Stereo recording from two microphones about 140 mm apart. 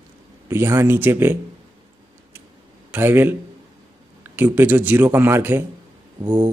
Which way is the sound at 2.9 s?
15° right (ahead or behind).